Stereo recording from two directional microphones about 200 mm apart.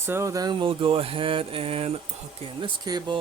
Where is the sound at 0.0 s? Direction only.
10° right (ahead or behind).